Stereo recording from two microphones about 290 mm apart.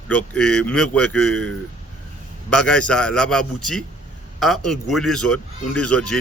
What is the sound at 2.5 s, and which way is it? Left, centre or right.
A man's voice, centre.